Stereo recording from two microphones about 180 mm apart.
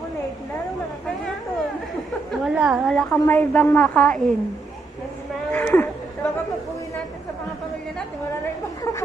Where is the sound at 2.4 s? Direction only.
5° right (ahead or behind).